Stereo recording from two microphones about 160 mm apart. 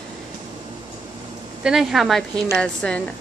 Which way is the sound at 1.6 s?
5° right (ahead or behind).